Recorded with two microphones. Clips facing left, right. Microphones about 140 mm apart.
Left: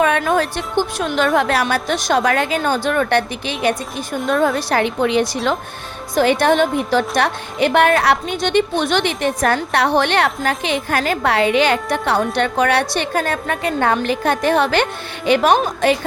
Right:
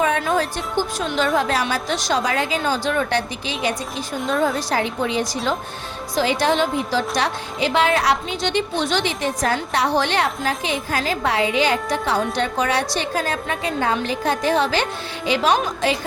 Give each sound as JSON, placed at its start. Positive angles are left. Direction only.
{"t": 0.0, "sound": "a woman's voice", "side_deg": 60}
{"t": 6.1, "sound": "speech", "side_deg": 55}